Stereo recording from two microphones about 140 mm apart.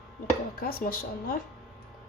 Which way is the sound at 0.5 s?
90° left.